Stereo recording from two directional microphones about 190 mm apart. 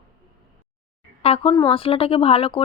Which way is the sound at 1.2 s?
30° left (ahead or behind).